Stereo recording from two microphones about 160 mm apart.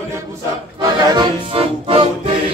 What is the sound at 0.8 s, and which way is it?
Music, 25° right (ahead or behind).